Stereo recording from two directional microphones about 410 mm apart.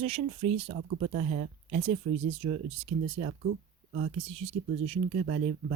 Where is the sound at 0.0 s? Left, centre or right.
Centre.